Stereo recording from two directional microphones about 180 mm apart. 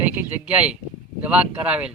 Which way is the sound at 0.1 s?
5° right (ahead or behind).